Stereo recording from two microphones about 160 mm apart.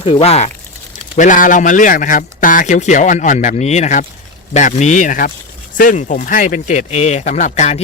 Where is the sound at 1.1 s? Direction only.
55° left (ahead or behind).